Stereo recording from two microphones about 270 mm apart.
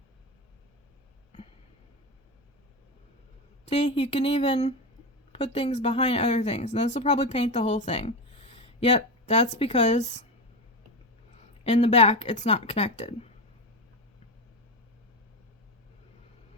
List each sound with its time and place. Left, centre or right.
3.7 s speech: left
11.6 s speech: left